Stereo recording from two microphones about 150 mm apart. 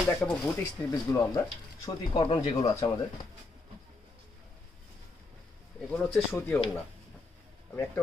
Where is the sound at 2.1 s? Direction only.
35° left (ahead or behind).